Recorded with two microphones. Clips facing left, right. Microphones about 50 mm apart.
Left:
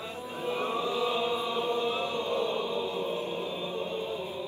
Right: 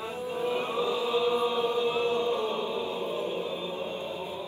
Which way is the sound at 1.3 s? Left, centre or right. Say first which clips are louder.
Right 3 dB; right.